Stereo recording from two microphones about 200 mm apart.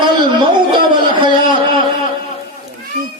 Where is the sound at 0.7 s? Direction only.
25° right (ahead or behind).